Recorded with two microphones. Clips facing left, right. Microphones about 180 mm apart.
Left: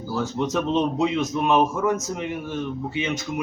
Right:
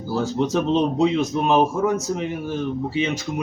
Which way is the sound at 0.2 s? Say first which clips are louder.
Right 3 dB; 30° right (ahead or behind).